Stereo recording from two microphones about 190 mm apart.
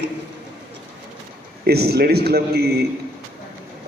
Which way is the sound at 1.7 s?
55° right (ahead or behind).